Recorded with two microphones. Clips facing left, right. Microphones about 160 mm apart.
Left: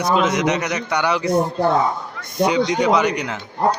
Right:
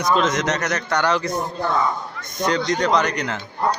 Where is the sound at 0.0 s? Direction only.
10° left (ahead or behind).